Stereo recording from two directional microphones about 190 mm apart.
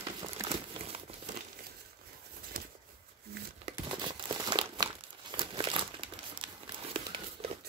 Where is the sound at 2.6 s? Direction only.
50° right (ahead or behind).